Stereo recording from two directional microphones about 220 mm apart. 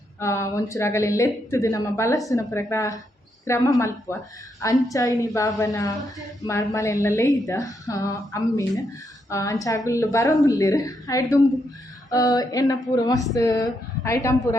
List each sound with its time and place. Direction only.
0.2 s speech: 15° left (ahead or behind)